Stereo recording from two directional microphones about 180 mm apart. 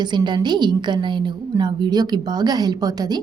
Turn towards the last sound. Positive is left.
turn(degrees=-20)  # may be behind; listen again after turning